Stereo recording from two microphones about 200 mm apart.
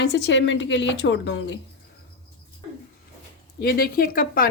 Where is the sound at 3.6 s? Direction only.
50° left (ahead or behind).